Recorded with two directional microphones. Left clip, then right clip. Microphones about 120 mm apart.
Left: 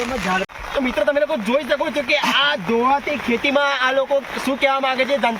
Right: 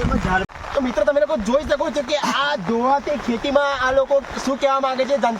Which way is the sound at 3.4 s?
40° right (ahead or behind).